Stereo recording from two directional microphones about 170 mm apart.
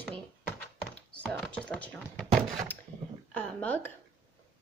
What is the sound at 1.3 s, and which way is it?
Speech, 5° left (ahead or behind).